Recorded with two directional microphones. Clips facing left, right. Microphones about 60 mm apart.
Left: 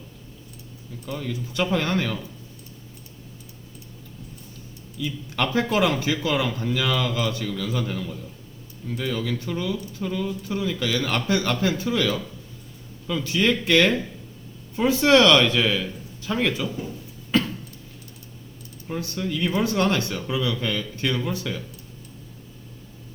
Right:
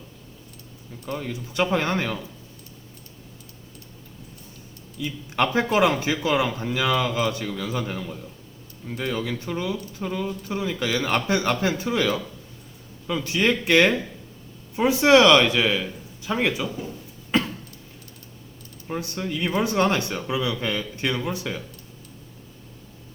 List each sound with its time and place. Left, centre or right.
1.0 s speech: right
4.9 s speech: right
17.3 s a sound: right
18.9 s speech: right